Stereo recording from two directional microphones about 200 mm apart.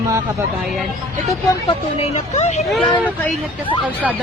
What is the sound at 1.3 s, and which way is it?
Speech, 30° left (ahead or behind).